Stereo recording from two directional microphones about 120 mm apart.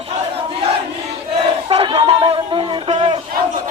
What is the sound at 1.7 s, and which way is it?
Chatter, 50° right (ahead or behind).